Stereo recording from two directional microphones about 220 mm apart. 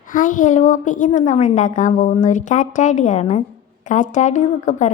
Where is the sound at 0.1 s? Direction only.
35° left (ahead or behind).